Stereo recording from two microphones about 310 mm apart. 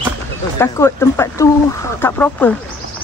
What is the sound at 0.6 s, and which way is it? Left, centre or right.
Speech, centre.